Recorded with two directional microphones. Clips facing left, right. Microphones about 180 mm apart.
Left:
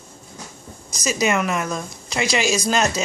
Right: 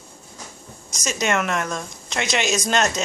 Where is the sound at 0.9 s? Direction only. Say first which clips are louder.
Left 2 dB; 5° left (ahead or behind).